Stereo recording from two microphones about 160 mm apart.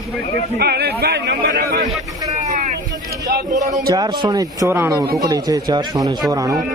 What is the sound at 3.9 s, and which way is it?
A man's voice, 25° right (ahead or behind).